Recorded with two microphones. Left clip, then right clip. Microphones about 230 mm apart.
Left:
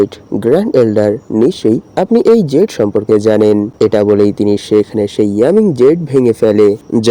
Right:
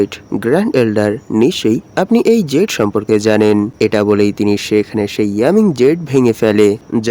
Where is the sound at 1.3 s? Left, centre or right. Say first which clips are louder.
Even; right.